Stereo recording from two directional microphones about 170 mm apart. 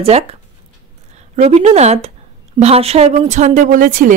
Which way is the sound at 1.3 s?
40° right (ahead or behind).